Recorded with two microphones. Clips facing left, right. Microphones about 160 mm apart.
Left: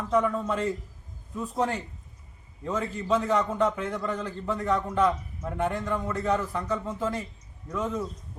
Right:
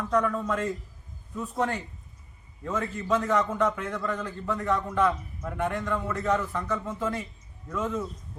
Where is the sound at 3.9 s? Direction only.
10° left (ahead or behind).